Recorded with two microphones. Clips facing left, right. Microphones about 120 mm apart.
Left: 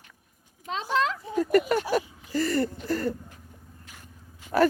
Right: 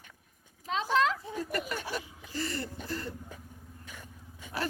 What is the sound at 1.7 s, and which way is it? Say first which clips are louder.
Speech: left 11 dB; 50° left (ahead or behind).